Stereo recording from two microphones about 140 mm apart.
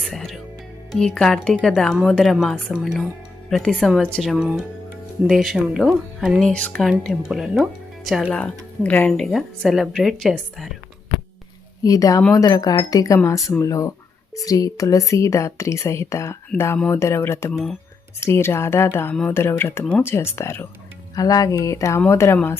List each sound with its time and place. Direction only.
0.0 s speech: centre (ahead or behind)
7.0 s speech: centre (ahead or behind)
11.8 s speech: 25° left (ahead or behind)
17.5 s speech: centre (ahead or behind)
18.2 s speech: 20° left (ahead or behind)